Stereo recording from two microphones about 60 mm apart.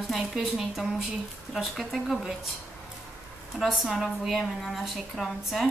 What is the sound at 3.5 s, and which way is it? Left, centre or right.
A woman's voice, centre.